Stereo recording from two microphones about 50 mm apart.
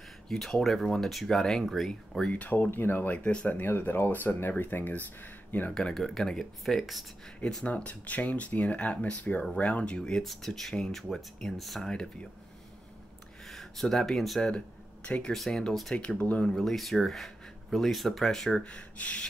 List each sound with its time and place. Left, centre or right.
0.3 s speech: centre
1.9 s speech: centre
2.3 s speech: left
2.7 s speech: left
5.8 s speech: centre
7.6 s speech: left
10.2 s speech: centre
13.5 s speech: centre
15.0 s speech: left
15.3 s speech: centre
16.0 s speech: left
16.4 s speech: centre
18.6 s speech: left